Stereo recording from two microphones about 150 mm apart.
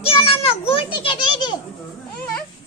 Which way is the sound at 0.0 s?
40° left (ahead or behind).